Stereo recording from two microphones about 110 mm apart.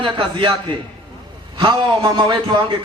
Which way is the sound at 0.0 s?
50° right (ahead or behind).